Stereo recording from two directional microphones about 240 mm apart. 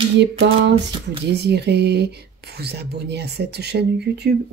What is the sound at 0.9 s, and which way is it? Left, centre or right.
Speech, right.